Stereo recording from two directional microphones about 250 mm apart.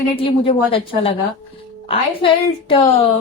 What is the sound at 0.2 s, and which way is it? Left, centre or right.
Speech, left.